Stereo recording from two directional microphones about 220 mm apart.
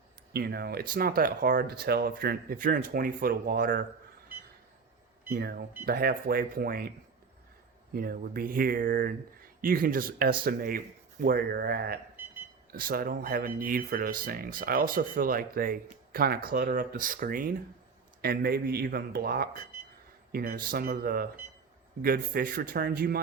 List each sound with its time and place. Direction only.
0.3 s speech: 45° right (ahead or behind)
5.3 s speech: 45° right (ahead or behind)
7.9 s speech: 40° right (ahead or behind)